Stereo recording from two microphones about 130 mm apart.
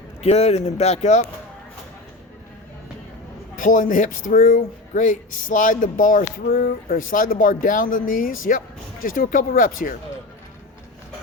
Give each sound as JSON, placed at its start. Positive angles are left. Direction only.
{"t": 0.2, "sound": "speech", "side_deg": 55}
{"t": 3.6, "sound": "speech", "side_deg": 90}